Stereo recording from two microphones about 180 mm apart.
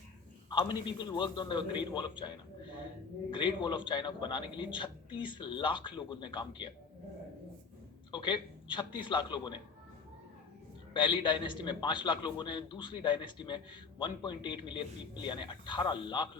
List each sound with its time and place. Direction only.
0.5 s a man's voice: 25° left (ahead or behind)
8.1 s a man's voice: 25° left (ahead or behind)
10.9 s a man's voice: 25° left (ahead or behind)